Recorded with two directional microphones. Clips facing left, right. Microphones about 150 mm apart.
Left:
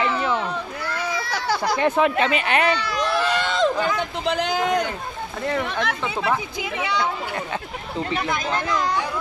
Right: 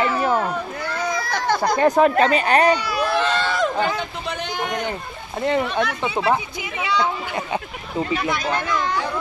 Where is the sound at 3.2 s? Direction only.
15° left (ahead or behind).